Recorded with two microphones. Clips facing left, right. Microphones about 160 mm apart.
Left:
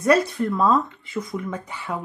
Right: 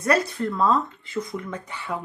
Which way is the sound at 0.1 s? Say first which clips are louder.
Left 4 dB; centre (ahead or behind).